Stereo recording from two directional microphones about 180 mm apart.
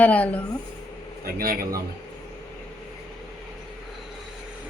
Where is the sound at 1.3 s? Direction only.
55° right (ahead or behind).